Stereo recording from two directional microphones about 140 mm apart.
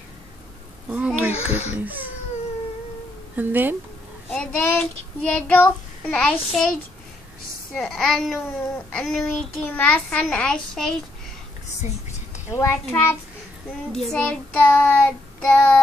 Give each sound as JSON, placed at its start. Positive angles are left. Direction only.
{"t": 0.8, "sound": "a sound", "side_deg": -10}
{"t": 1.7, "sound": "speech", "side_deg": -10}
{"t": 3.3, "sound": "speech", "side_deg": -15}
{"t": 4.3, "sound": "child singing", "side_deg": 5}
{"t": 7.7, "sound": "a woman's voice", "side_deg": 0}
{"t": 8.9, "sound": "child singing", "side_deg": 5}
{"t": 12.4, "sound": "a child's voice", "side_deg": 20}
{"t": 13.9, "sound": "child singing", "side_deg": 5}